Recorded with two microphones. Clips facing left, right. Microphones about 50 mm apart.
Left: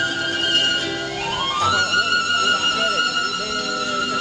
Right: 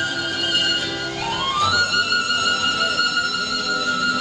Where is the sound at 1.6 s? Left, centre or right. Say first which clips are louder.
Even; left.